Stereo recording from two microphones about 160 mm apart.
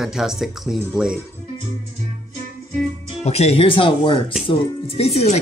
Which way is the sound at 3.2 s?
40° left (ahead or behind).